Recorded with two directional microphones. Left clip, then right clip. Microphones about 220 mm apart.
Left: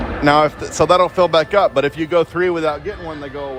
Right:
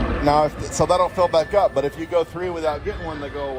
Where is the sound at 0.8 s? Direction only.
45° left (ahead or behind).